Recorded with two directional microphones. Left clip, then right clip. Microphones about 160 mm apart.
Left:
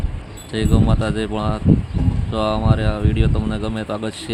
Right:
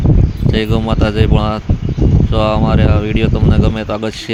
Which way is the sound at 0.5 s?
25° right (ahead or behind).